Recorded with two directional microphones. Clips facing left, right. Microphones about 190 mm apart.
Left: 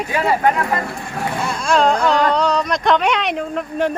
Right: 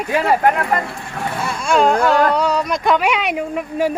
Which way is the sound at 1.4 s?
5° right (ahead or behind).